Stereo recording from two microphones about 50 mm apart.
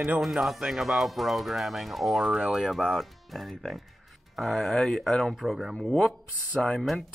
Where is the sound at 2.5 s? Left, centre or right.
Centre.